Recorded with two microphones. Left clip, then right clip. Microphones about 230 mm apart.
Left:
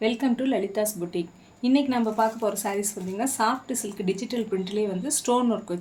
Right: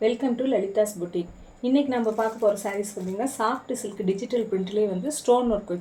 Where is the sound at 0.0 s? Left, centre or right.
Left.